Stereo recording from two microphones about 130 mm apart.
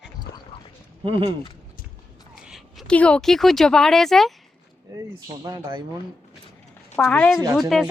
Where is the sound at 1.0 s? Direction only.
45° right (ahead or behind).